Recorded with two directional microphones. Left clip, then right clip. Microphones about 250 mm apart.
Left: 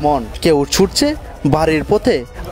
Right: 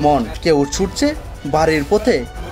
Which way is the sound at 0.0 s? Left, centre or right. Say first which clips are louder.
Even; left.